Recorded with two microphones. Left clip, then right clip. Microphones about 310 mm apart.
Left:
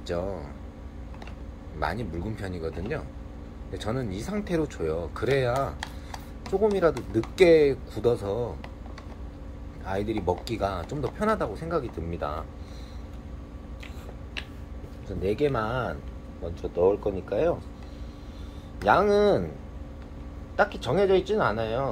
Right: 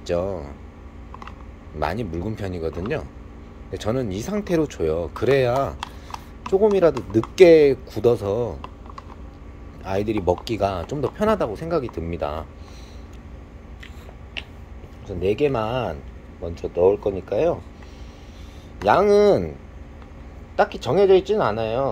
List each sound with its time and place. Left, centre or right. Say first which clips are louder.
0.0 s speech: right 7 dB; right
1.8 s speech: right 5 dB; right
9.8 s speech: right 6 dB; right
15.0 s speech: right 5 dB; right
18.9 s speech: right 5 dB; right
20.5 s speech: right 5 dB; right